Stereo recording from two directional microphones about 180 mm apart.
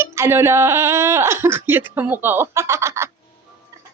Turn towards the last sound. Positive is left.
turn(degrees=-15)  # may be behind; listen again after turning